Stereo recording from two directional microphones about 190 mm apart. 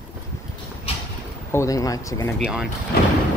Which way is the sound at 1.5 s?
15° left (ahead or behind).